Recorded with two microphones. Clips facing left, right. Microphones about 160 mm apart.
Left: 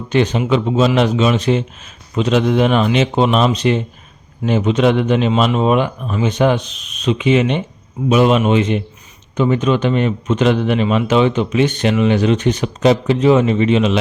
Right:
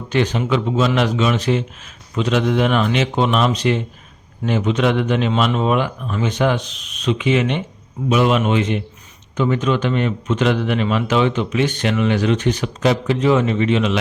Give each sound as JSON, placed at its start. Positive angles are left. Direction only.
{"t": 0.1, "sound": "a man's voice", "side_deg": 20}